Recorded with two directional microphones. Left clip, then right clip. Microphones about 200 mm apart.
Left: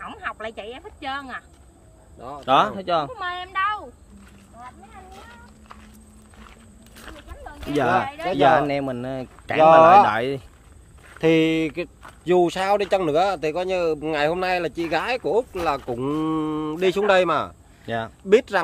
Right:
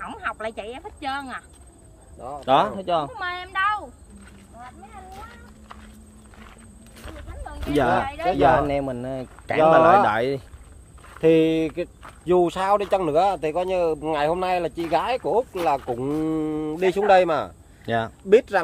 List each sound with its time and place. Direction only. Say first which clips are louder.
0.0 s speech: right 2 dB; 5° left (ahead or behind)
2.1 s speech: right 2 dB; 50° left (ahead or behind)
2.4 s speech: left 1 dB; 10° left (ahead or behind)
3.2 s speech: even; centre (ahead or behind)
7.4 s speech: right 1 dB; centre (ahead or behind)
8.4 s speech: left 2 dB; 20° left (ahead or behind)
10.0 s speech: even; 5° left (ahead or behind)
11.1 s speech: right 1 dB; 55° left (ahead or behind)
17.8 s speech: right 3 dB; 15° right (ahead or behind)
18.3 s speech: right 1 dB; 45° left (ahead or behind)